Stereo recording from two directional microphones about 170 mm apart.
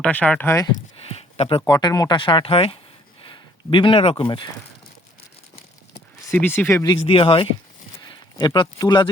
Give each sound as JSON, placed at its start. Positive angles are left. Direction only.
{"t": 0.0, "sound": "speech", "side_deg": 10}
{"t": 1.1, "sound": "speech", "side_deg": 35}
{"t": 6.2, "sound": "speech", "side_deg": 10}
{"t": 7.1, "sound": "speech", "side_deg": 30}